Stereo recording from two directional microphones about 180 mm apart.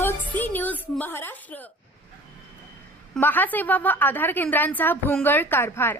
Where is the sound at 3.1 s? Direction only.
10° left (ahead or behind).